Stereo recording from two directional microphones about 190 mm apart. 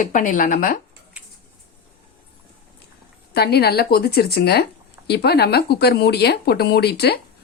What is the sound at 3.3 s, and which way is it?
Speech, 60° left (ahead or behind).